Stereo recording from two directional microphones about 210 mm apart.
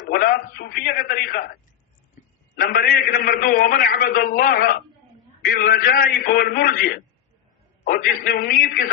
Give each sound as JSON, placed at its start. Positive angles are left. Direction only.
{"t": 0.0, "sound": "a man's voice", "side_deg": 45}
{"t": 2.6, "sound": "a man's voice", "side_deg": 45}